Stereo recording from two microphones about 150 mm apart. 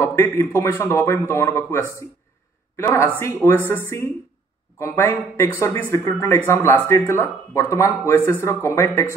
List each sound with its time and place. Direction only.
0.0 s a woman's voice: 15° left (ahead or behind)